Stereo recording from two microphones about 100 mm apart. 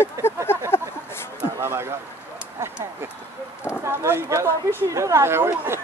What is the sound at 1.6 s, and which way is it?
Speech, 25° right (ahead or behind).